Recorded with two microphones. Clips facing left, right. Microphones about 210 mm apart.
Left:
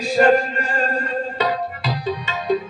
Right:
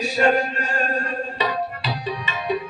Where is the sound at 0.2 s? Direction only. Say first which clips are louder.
Left 5 dB; 55° left (ahead or behind).